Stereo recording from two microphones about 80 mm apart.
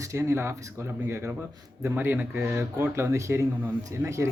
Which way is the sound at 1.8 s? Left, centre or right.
Right.